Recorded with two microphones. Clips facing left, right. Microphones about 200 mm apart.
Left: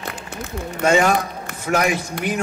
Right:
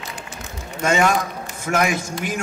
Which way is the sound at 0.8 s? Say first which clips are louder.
Left 2 dB; 40° left (ahead or behind).